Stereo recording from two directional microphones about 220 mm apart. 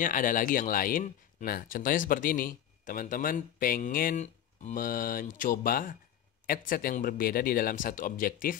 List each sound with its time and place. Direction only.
0.0 s speech: 40° left (ahead or behind)